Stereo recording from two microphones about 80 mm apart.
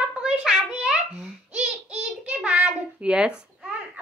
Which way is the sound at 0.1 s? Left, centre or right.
Centre.